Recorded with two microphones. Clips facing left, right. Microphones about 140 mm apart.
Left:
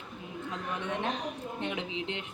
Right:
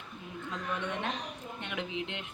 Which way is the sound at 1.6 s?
30° left (ahead or behind).